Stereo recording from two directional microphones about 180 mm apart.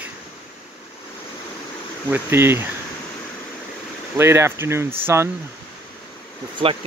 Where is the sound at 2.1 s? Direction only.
15° right (ahead or behind).